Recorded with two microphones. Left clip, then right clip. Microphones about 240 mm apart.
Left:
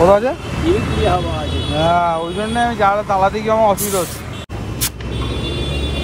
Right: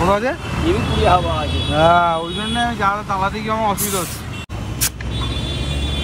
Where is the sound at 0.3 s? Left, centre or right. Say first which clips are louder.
Left 2 dB; right.